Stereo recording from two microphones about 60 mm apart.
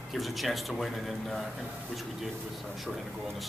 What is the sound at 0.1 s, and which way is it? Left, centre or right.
A man's voice, centre.